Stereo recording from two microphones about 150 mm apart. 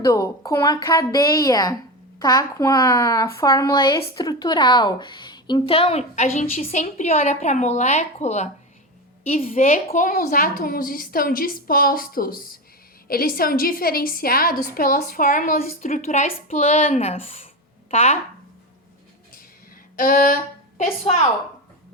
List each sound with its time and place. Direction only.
0.0 s a woman's voice: 20° left (ahead or behind); by 18.2 s 50° left (ahead or behind)
20.0 s speech: 70° left (ahead or behind)
21.0 s a woman's voice: 45° left (ahead or behind)